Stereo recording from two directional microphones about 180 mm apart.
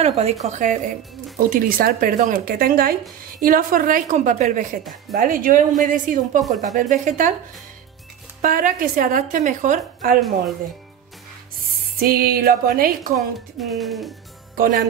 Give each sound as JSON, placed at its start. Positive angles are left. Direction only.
{"t": 0.0, "sound": "a woman's voice", "side_deg": -35}
{"t": 8.4, "sound": "speech", "side_deg": -50}
{"t": 12.0, "sound": "speech", "side_deg": -55}
{"t": 13.1, "sound": "speech", "side_deg": 0}
{"t": 14.5, "sound": "music", "side_deg": -55}